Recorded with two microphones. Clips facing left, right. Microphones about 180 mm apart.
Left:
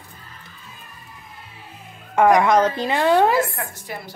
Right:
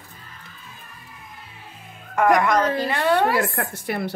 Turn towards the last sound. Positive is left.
turn(degrees=-65)  # may be behind; listen again after turning